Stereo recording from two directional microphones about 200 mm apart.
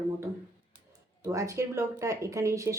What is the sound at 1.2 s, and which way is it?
A woman's voice, 15° right (ahead or behind).